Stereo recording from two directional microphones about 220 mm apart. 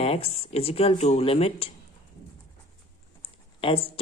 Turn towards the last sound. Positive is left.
turn(degrees=25)  # may be behind; listen again after turning